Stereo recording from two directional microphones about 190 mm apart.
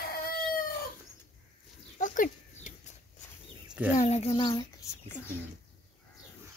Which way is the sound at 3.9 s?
35° left (ahead or behind).